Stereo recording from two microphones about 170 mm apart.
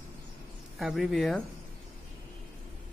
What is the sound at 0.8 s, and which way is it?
Speech, centre (ahead or behind).